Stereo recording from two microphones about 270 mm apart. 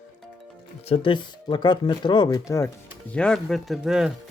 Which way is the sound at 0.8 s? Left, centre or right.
Left.